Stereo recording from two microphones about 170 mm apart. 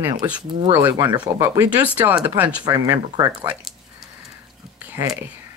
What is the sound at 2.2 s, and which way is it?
Speech, 10° right (ahead or behind).